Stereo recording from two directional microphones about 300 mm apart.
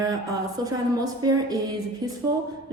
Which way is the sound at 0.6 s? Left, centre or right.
Centre.